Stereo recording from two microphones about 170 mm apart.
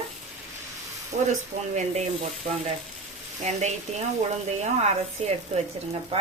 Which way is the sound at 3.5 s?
40° right (ahead or behind).